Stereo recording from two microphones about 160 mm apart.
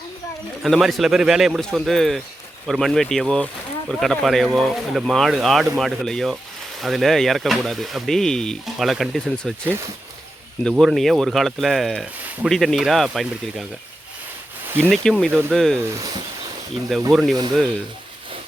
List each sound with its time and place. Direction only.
0.6 s speech: centre (ahead or behind)
9.6 s speech: 15° right (ahead or behind)
10.6 s speech: 5° left (ahead or behind)
14.8 s speech: 5° left (ahead or behind)
15.3 s speech: 15° right (ahead or behind)
15.5 s speech: centre (ahead or behind)
16.0 s speech: 25° right (ahead or behind)
17.1 s speech: centre (ahead or behind)